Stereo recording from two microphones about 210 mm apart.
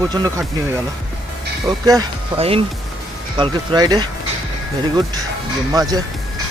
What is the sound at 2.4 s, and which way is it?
Speech, 30° right (ahead or behind).